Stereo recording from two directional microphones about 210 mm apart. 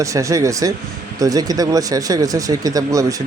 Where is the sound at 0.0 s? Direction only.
15° right (ahead or behind).